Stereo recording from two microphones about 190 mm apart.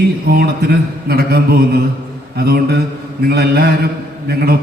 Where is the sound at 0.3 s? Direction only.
55° right (ahead or behind).